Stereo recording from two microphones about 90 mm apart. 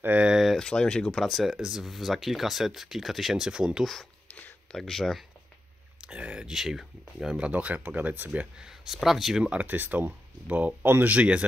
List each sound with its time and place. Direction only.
0.0 s a sound: 15° right (ahead or behind)
0.4 s speech: 5° left (ahead or behind)
4.3 s a sound: 20° left (ahead or behind)
4.7 s speech: 5° left (ahead or behind)
5.9 s speech: 15° right (ahead or behind)
9.5 s speech: 20° right (ahead or behind)